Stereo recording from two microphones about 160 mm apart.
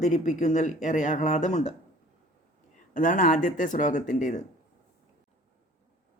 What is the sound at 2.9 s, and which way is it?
A man's voice, 50° left (ahead or behind).